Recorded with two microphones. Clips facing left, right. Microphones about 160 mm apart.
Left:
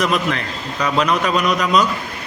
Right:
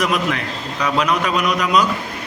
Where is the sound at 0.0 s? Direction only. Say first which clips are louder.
Left 1 dB; 10° right (ahead or behind).